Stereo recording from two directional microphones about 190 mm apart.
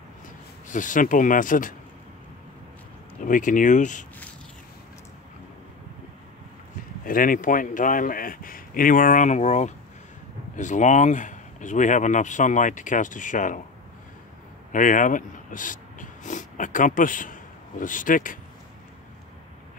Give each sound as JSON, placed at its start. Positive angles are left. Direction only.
{"t": 0.7, "sound": "speech", "side_deg": 45}
{"t": 3.2, "sound": "speech", "side_deg": 45}
{"t": 7.1, "sound": "speech", "side_deg": 45}
{"t": 14.7, "sound": "speech", "side_deg": 45}